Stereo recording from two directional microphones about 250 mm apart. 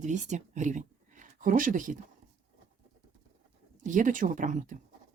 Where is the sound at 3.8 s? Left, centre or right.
Right.